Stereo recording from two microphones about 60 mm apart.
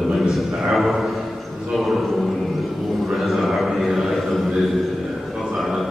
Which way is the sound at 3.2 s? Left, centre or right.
Centre.